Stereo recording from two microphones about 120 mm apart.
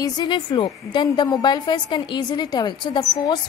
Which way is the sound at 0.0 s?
35° left (ahead or behind).